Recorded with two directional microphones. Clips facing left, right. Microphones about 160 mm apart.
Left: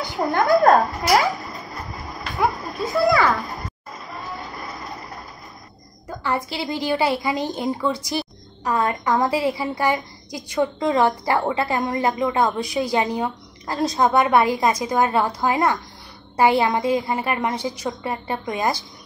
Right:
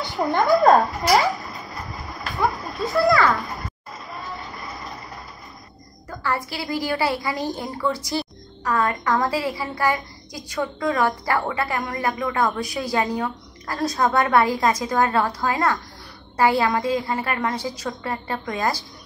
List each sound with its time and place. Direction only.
0.0 s a woman's voice: centre (ahead or behind)
1.0 s cat: centre (ahead or behind)
3.3 s a woman's voice: centre (ahead or behind)
4.3 s vehicle: centre (ahead or behind)
6.0 s a woman's voice: 20° left (ahead or behind)